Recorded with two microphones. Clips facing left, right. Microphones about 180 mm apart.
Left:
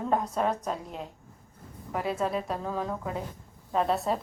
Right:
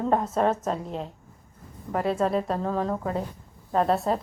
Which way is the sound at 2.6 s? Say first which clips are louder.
Right 5 dB; 40° right (ahead or behind).